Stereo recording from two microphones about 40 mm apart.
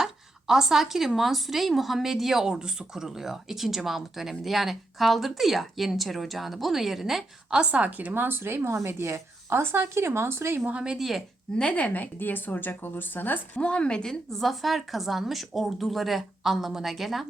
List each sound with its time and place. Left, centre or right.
0.0 s speech: centre
7.5 s a woman's voice: right
8.1 s speech: right
10.9 s speech: centre
11.5 s speech: left
12.2 s speech: left
13.6 s a woman's voice: left
14.3 s speech: centre